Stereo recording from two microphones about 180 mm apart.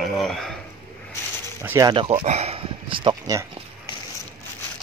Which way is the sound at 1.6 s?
20° right (ahead or behind).